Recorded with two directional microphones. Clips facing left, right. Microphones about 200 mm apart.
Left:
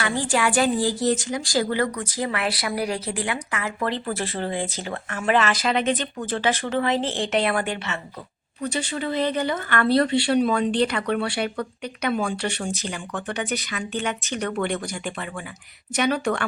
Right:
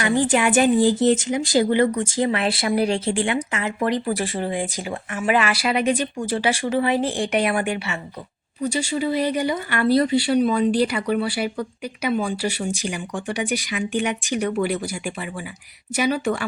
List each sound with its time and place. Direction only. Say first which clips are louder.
0.0 s a woman's voice: right 4 dB; 20° right (ahead or behind)